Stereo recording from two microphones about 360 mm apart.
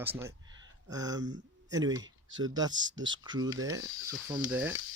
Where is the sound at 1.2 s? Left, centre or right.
Right.